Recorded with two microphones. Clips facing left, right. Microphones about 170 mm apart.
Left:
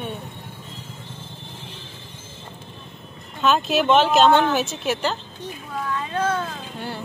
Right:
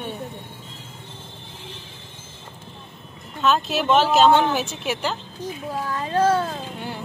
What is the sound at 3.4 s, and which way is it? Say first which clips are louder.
Speech: left 2 dB; centre (ahead or behind).